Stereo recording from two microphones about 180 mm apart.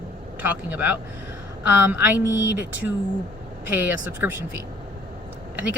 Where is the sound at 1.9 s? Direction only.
10° right (ahead or behind).